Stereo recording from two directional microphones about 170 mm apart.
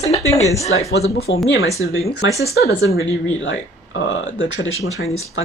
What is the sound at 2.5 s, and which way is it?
Speech, 75° left (ahead or behind).